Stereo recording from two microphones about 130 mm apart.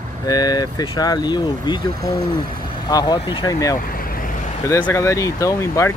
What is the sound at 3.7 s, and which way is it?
Vehicle, 90° left.